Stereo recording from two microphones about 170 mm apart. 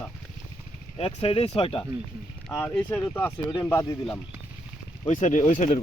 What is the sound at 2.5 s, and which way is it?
Speech, 5° left (ahead or behind).